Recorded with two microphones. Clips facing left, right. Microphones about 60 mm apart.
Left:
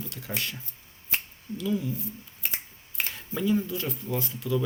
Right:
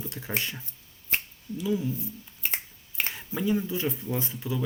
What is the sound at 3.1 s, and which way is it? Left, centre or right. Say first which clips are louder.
Speech: left 1 dB; centre.